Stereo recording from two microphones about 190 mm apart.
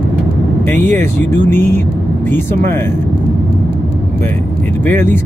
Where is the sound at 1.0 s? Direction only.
10° left (ahead or behind).